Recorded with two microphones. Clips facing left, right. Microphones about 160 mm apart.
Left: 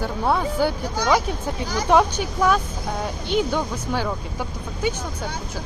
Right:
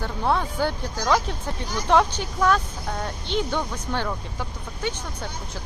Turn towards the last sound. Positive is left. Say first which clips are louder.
# left 4 dB
turn(degrees=10)  # may be behind; listen again after turning